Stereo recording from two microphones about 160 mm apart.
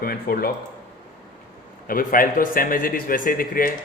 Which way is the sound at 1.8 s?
60° left (ahead or behind).